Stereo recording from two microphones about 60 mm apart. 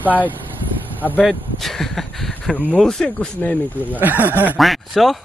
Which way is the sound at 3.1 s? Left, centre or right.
Left.